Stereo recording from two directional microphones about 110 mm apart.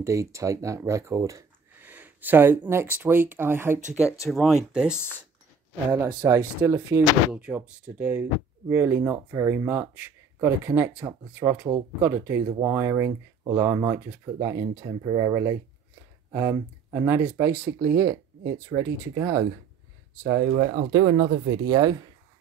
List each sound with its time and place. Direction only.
0.0 s speech: 25° right (ahead or behind)
1.8 s a sound: 15° right (ahead or behind)
3.0 s speech: 15° right (ahead or behind)
4.3 s speech: centre (ahead or behind)
5.9 s speech: 30° right (ahead or behind)
7.3 s speech: 10° right (ahead or behind)
20.2 s speech: 35° right (ahead or behind)